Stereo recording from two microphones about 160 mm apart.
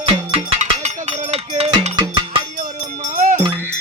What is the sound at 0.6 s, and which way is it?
Music, 45° right (ahead or behind).